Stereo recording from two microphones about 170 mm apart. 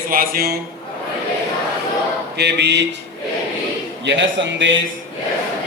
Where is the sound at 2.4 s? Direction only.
85° right.